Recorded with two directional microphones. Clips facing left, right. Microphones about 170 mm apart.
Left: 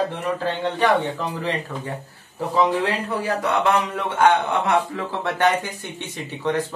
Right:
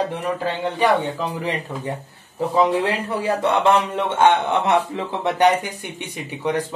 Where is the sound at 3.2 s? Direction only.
25° right (ahead or behind).